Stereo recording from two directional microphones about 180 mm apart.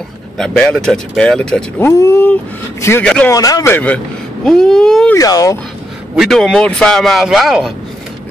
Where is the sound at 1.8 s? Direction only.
15° left (ahead or behind).